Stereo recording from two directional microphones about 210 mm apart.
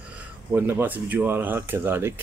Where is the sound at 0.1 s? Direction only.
10° right (ahead or behind).